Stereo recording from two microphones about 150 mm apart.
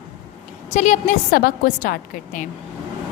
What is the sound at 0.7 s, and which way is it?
A woman's voice, 55° left (ahead or behind).